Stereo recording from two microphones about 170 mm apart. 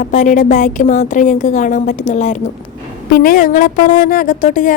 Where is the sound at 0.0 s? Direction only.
45° left (ahead or behind).